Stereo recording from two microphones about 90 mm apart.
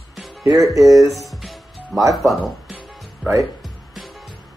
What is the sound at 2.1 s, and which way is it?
Speech, centre (ahead or behind).